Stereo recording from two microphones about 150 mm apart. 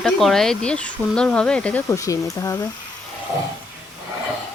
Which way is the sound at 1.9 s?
20° left (ahead or behind).